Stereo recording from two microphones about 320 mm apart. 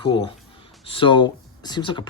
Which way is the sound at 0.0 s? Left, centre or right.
Centre.